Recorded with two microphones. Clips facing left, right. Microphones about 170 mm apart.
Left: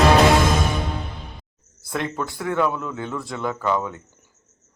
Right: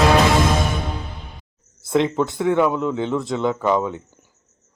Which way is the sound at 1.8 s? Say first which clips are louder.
Right 8 dB; 20° right (ahead or behind).